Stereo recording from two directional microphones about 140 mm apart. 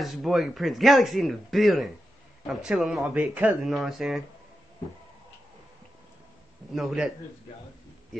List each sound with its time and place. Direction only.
0.0 s speech: centre (ahead or behind)
6.7 s speech: centre (ahead or behind)